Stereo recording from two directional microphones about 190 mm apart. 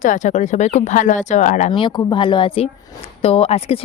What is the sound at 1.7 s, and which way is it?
Speech, 25° left (ahead or behind).